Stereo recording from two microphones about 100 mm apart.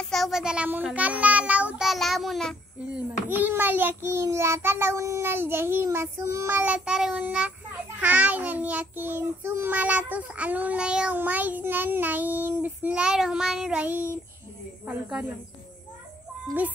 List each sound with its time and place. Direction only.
0.0 s a sound: centre (ahead or behind)
0.8 s child singing: 15° right (ahead or behind)
1.9 s child singing: centre (ahead or behind)
2.9 s child singing: 20° right (ahead or behind)